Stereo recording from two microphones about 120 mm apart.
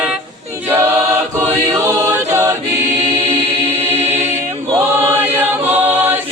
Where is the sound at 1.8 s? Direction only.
20° right (ahead or behind).